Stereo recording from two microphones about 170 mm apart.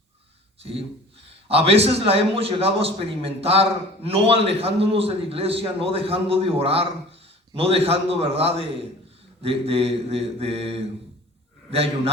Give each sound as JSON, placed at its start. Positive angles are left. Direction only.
{"t": 0.6, "sound": "a man's voice", "side_deg": -35}